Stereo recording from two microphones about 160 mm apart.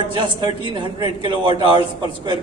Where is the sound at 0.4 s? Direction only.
30° right (ahead or behind).